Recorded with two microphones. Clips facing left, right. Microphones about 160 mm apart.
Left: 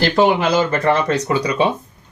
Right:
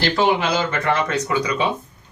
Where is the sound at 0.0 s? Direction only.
40° left (ahead or behind).